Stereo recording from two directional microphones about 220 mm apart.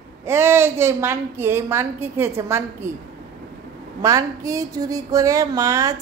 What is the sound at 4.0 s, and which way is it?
A woman's voice, 15° right (ahead or behind).